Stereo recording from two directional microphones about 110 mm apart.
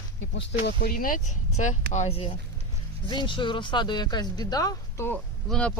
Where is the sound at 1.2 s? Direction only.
90° left; by 2.3 s 60° left (ahead or behind).